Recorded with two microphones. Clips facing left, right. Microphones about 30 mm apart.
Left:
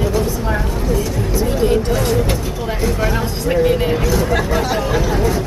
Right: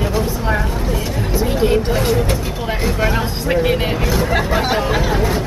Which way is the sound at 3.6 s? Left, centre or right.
Right.